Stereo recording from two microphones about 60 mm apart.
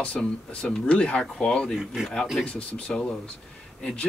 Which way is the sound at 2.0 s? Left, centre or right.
Centre.